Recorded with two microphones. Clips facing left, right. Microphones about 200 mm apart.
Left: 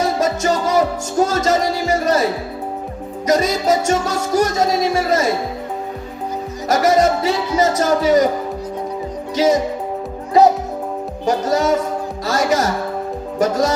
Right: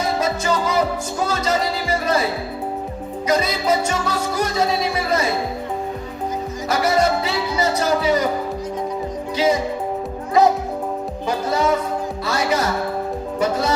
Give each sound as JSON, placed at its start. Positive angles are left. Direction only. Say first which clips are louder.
{"t": 0.0, "sound": "music", "louder": "left 3 dB", "side_deg": 45}
{"t": 6.7, "sound": "music", "louder": "left 4 dB", "side_deg": 45}
{"t": 9.3, "sound": "speech", "louder": "left 3 dB", "side_deg": 45}
{"t": 11.3, "sound": "music", "louder": "left 3 dB", "side_deg": 45}